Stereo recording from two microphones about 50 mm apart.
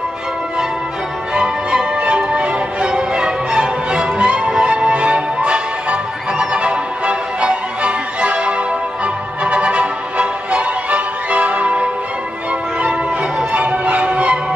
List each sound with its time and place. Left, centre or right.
1.3 s music: centre
13.5 s music: right